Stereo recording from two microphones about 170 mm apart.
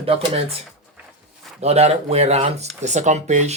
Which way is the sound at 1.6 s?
40° right (ahead or behind).